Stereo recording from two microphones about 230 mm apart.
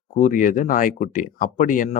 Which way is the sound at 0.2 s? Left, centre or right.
Left.